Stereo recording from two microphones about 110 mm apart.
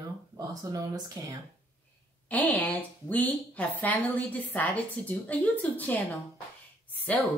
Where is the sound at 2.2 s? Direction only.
15° left (ahead or behind).